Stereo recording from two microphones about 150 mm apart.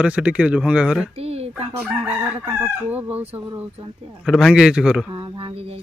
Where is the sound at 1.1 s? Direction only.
45° right (ahead or behind).